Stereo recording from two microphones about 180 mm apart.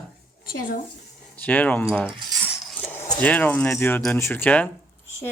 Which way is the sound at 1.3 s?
10° left (ahead or behind).